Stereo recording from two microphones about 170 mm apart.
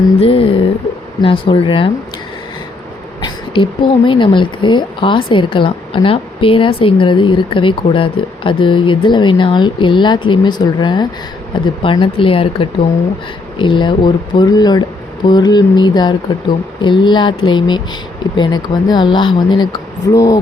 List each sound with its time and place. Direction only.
0.2 s speech: 35° left (ahead or behind)
3.2 s speech: 30° left (ahead or behind)